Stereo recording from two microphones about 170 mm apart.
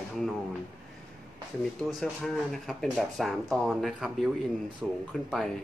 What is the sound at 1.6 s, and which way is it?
Speech, 5° left (ahead or behind).